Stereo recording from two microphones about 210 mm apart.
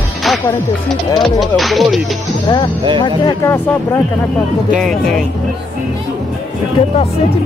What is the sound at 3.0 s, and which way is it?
Speech, 20° left (ahead or behind).